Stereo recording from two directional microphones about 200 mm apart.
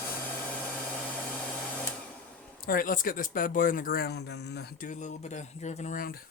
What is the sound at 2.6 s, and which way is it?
Speech, 45° left (ahead or behind).